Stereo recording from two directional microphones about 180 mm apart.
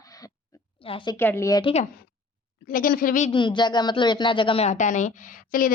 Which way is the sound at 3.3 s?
25° left (ahead or behind).